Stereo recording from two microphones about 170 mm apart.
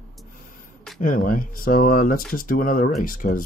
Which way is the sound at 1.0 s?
55° left (ahead or behind).